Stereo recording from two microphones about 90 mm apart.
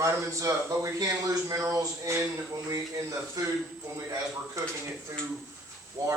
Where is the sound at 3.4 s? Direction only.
40° right (ahead or behind).